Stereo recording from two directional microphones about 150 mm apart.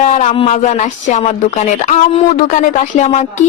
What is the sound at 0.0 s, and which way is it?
Speech, 50° left (ahead or behind).